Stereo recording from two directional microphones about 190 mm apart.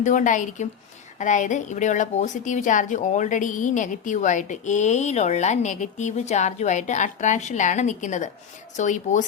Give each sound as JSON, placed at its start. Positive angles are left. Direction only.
{"t": 0.0, "sound": "a woman's voice", "side_deg": 40}